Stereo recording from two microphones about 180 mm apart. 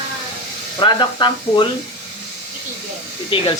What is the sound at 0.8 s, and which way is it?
Speech, 25° left (ahead or behind).